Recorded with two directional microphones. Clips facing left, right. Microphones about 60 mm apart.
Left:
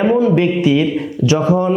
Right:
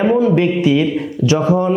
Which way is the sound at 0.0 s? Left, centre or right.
Left.